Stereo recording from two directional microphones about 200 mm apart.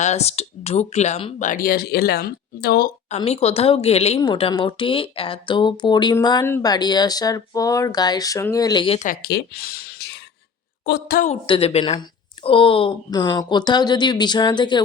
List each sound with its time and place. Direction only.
0.0 s speech: 35° left (ahead or behind); by 2.9 s 50° left (ahead or behind)
3.2 s speech: 30° left (ahead or behind)
9.0 s a woman's voice: 50° left (ahead or behind)
11.3 s speech: 30° left (ahead or behind)